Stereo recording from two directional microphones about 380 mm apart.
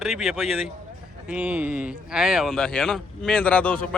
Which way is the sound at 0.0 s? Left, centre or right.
Centre.